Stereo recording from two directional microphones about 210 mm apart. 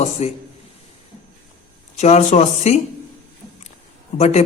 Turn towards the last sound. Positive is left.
turn(degrees=30)  # may be behind; listen again after turning